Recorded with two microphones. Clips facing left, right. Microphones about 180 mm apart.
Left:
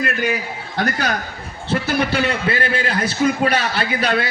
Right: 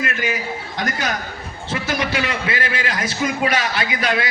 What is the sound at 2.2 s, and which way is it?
A man's voice, 35° left (ahead or behind).